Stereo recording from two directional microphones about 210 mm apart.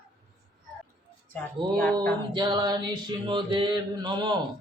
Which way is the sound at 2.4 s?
20° right (ahead or behind).